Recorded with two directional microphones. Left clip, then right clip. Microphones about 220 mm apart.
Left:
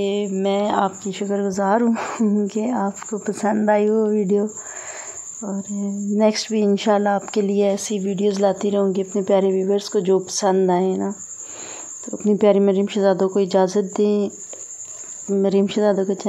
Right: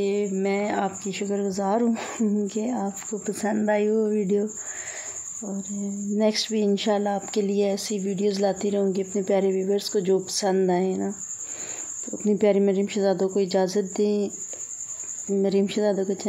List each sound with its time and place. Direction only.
0.0 s speech: 25° left (ahead or behind)
12.3 s speech: 10° left (ahead or behind)
15.3 s speech: 10° left (ahead or behind)